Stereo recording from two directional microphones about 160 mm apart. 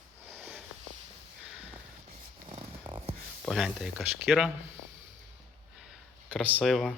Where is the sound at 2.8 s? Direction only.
30° right (ahead or behind).